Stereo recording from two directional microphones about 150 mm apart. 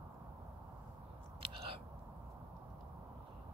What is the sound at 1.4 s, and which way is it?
Chewing, 40° right (ahead or behind).